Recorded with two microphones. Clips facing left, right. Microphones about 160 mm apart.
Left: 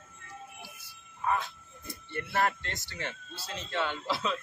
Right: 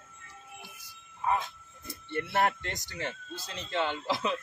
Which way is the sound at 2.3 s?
20° right (ahead or behind).